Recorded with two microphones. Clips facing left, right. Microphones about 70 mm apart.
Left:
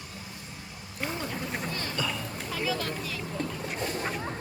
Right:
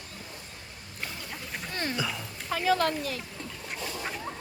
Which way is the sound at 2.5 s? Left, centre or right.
Right.